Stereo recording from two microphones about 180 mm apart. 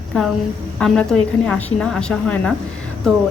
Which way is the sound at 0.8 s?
5° left (ahead or behind).